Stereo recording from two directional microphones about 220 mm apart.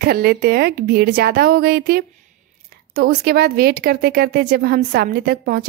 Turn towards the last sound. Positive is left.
turn(degrees=-40)  # may be behind; listen again after turning